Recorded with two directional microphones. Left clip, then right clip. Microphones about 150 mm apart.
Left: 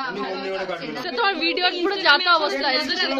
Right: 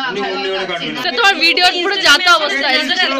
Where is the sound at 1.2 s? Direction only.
15° left (ahead or behind).